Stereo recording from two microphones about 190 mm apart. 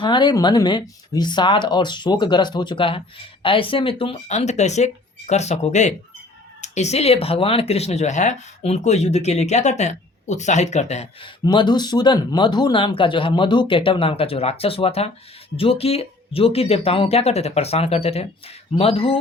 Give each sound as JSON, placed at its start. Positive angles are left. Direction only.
{"t": 0.0, "sound": "speech", "side_deg": 25}
{"t": 11.4, "sound": "speech", "side_deg": 25}